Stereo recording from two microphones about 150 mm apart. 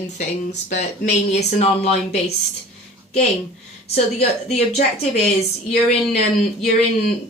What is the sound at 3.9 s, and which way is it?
Speech, 45° left (ahead or behind).